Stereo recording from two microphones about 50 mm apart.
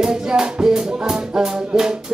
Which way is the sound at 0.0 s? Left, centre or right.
Centre.